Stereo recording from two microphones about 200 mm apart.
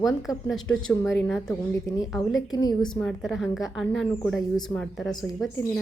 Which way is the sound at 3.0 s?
Centre (ahead or behind).